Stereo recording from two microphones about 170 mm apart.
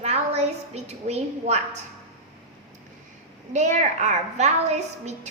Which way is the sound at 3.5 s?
45° right (ahead or behind).